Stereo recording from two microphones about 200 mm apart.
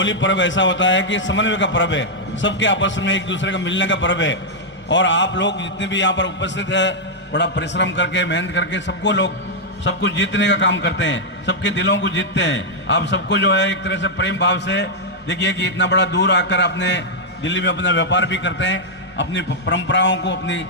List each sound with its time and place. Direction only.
0.0 s a man's voice: 65° left (ahead or behind)